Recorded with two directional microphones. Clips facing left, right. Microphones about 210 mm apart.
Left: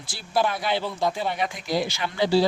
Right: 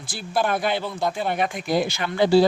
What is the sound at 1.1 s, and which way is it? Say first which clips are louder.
A man's voice: right 3 dB; 55° right (ahead or behind).